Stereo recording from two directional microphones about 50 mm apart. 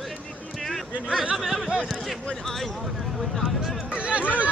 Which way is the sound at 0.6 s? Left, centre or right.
Centre.